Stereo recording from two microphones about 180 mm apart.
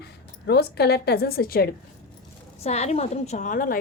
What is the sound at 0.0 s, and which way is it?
A woman's voice, 65° left (ahead or behind).